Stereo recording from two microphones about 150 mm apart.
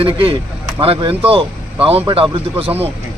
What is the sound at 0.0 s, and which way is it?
Speech, 35° right (ahead or behind).